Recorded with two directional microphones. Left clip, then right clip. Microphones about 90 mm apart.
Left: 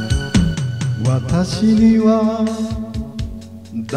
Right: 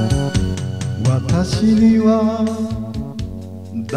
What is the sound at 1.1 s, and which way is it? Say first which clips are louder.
Music: even; 10° left (ahead or behind).